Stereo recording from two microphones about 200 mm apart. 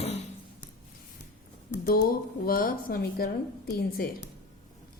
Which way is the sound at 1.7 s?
45° left (ahead or behind).